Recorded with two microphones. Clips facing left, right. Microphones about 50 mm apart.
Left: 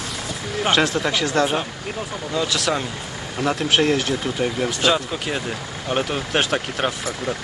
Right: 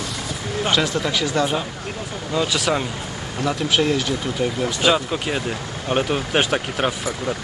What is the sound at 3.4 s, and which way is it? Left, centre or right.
Speech, left.